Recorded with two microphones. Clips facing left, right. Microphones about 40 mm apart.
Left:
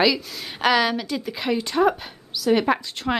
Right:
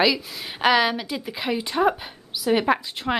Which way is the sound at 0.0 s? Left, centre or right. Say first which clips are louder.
Left 1 dB; centre.